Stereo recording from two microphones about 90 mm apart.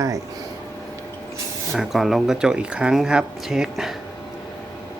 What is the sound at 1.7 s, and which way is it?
Speech, centre (ahead or behind).